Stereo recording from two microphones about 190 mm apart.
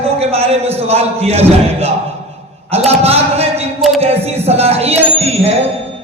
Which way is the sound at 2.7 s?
35° right (ahead or behind).